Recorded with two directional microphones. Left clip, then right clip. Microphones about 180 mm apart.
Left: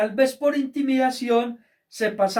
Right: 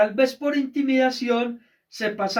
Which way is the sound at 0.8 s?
15° left (ahead or behind).